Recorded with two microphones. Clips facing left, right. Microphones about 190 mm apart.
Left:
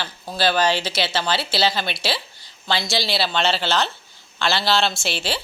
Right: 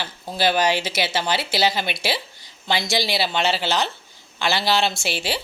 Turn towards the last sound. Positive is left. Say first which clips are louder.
# even
turn(degrees=-15)  # may be behind; listen again after turning